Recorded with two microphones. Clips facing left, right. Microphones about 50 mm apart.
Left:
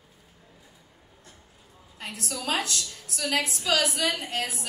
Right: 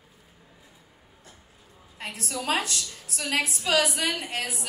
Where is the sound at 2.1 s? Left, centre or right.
Right.